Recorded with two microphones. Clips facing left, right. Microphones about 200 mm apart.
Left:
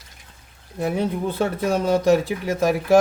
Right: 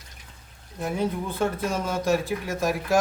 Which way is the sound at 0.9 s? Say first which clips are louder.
Left 2 dB; 65° left (ahead or behind).